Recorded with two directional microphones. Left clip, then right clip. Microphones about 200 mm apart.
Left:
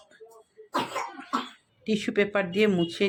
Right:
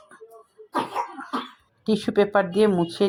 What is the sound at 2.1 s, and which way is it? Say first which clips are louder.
Speech: right 6 dB; 15° left (ahead or behind).